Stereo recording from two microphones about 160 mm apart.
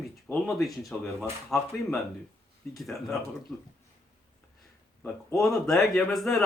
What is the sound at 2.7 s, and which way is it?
Speech, centre (ahead or behind).